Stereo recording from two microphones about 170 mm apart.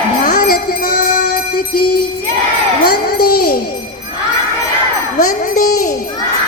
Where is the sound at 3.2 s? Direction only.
60° left (ahead or behind).